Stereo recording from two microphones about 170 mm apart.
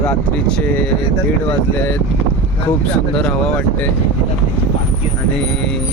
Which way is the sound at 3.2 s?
5° left (ahead or behind).